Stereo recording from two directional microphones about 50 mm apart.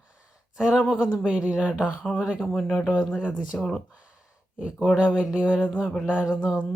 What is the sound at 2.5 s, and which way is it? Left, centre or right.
Speech, centre.